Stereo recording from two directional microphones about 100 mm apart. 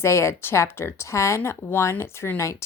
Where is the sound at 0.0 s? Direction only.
25° left (ahead or behind).